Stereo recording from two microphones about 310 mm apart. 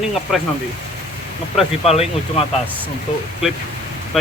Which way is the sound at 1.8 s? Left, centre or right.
Centre.